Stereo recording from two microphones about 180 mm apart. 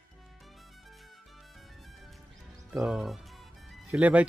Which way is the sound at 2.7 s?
5° right (ahead or behind).